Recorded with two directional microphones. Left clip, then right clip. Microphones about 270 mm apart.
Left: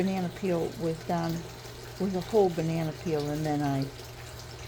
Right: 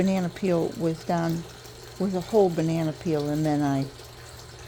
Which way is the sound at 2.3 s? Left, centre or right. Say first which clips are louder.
Right 4 dB; right.